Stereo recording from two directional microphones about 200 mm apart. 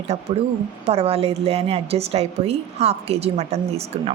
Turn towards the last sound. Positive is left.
turn(degrees=-30)  # may be behind; listen again after turning